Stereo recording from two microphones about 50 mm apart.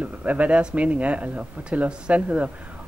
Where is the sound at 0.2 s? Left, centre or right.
Right.